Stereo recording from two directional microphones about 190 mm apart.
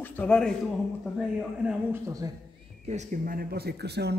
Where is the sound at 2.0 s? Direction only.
20° right (ahead or behind).